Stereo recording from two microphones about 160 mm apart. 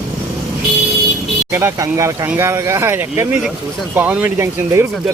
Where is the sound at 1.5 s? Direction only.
15° right (ahead or behind).